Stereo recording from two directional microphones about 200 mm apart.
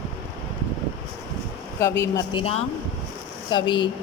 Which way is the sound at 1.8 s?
15° left (ahead or behind).